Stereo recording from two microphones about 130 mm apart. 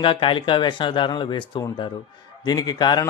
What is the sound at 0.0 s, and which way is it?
A man's voice, 40° left (ahead or behind).